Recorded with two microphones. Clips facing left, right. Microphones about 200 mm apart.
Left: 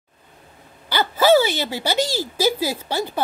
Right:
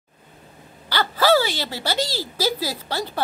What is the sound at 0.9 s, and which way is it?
Wail, 15° left (ahead or behind).